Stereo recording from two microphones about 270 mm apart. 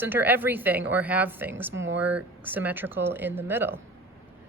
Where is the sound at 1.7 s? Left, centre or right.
Right.